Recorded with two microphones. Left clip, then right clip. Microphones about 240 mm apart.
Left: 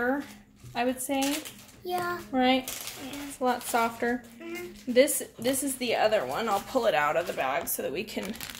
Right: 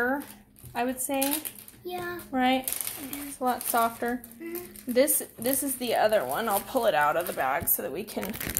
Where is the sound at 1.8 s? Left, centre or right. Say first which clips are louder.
Left 4 dB; left.